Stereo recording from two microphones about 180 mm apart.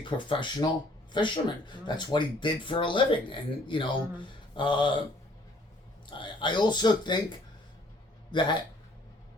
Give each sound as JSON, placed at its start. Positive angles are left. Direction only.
{"t": 0.0, "sound": "speech", "side_deg": 25}
{"t": 6.1, "sound": "a man's voice", "side_deg": 25}